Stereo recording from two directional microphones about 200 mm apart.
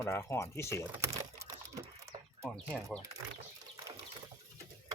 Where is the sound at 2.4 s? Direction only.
5° left (ahead or behind).